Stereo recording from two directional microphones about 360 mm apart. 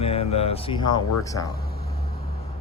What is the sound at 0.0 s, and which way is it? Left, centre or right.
Speech, centre.